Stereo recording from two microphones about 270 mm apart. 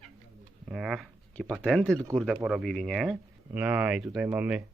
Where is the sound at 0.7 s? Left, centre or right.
Centre.